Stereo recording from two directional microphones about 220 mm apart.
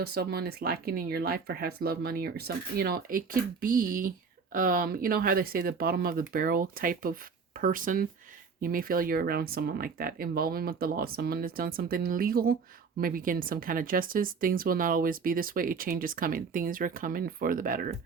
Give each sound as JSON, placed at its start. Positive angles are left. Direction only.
{"t": 0.0, "sound": "speech", "side_deg": -45}